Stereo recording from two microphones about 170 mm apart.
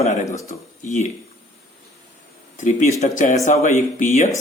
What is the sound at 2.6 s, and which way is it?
Speech, 45° left (ahead or behind).